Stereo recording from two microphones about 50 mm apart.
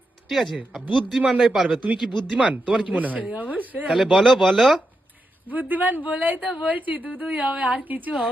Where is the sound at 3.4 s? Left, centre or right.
Left.